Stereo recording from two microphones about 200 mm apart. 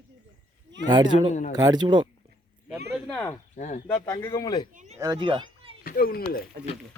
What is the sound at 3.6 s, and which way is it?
Speech, 35° left (ahead or behind).